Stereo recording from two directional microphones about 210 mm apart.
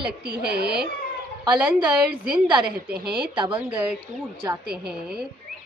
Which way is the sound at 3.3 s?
20° right (ahead or behind).